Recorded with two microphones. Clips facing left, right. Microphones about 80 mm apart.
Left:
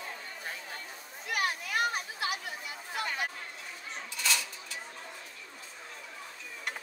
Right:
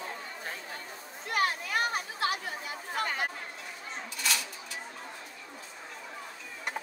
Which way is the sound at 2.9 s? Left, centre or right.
Right.